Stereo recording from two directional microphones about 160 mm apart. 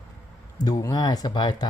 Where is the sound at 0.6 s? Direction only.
20° left (ahead or behind).